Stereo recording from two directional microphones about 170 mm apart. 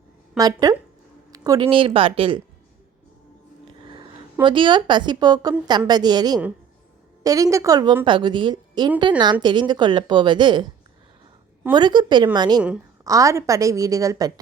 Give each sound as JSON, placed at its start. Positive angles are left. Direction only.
{"t": 0.3, "sound": "a woman's voice", "side_deg": -20}
{"t": 1.3, "sound": "a sound", "side_deg": -20}
{"t": 1.6, "sound": "speech", "side_deg": -30}
{"t": 3.8, "sound": "a sound", "side_deg": -30}
{"t": 4.4, "sound": "a woman's voice", "side_deg": -30}
{"t": 11.7, "sound": "a woman's voice", "side_deg": -25}